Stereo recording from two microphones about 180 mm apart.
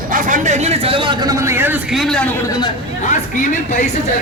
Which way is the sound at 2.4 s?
20° left (ahead or behind).